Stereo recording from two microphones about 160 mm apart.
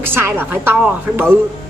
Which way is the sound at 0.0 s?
15° right (ahead or behind).